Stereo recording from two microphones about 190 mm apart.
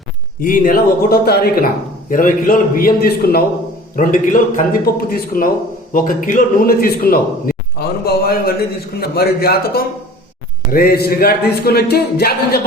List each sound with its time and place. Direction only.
0.4 s a man's voice: 45° left (ahead or behind)